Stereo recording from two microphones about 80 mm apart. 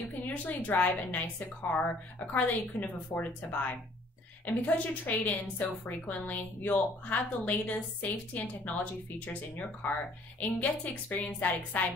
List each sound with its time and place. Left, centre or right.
0.3 s a woman's voice: centre